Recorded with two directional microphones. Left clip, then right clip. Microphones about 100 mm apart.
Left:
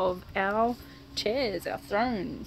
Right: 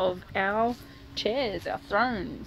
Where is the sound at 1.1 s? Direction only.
60° left (ahead or behind).